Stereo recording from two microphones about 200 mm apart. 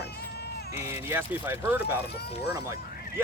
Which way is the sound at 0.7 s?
10° right (ahead or behind).